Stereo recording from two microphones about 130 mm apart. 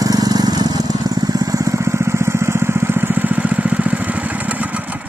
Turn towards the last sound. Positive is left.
turn(degrees=-10)  # may be behind; listen again after turning